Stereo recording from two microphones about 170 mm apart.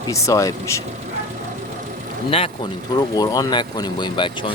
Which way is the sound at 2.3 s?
30° left (ahead or behind).